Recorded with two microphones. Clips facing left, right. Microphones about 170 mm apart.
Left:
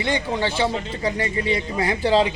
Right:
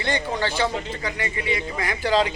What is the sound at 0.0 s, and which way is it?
Speech, 20° left (ahead or behind).